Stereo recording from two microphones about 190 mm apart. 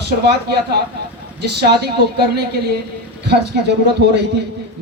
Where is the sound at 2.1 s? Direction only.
55° right (ahead or behind).